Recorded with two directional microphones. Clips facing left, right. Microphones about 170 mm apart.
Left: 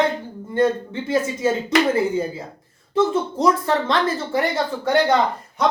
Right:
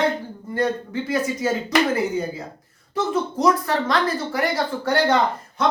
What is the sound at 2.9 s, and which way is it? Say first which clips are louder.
Speech: left 4 dB; 25° left (ahead or behind).